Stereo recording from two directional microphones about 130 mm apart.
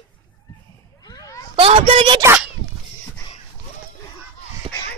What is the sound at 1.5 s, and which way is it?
Speech, 45° right (ahead or behind).